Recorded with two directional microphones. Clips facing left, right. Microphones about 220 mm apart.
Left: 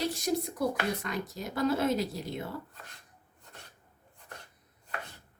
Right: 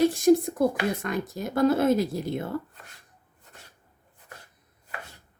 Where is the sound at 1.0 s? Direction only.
50° right (ahead or behind).